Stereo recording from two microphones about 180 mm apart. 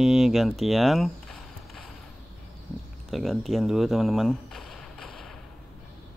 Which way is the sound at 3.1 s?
Centre (ahead or behind).